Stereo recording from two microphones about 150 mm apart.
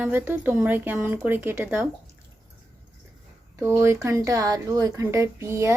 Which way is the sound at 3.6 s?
15° right (ahead or behind).